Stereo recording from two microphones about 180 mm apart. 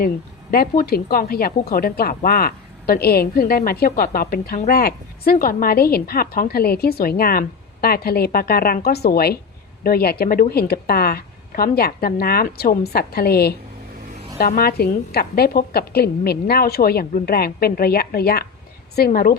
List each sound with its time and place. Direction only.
0.5 s a woman's voice: 55° left (ahead or behind)